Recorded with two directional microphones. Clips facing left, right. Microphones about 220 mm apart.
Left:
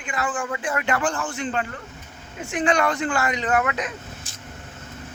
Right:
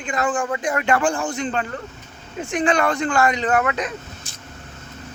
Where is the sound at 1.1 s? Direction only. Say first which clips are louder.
Right 4 dB; 15° right (ahead or behind).